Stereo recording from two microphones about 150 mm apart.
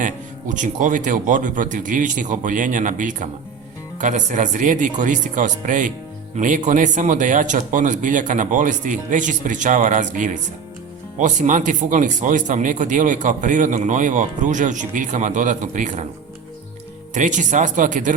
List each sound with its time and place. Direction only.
0.0 s speech: 60° right (ahead or behind)
17.2 s speech: 55° right (ahead or behind)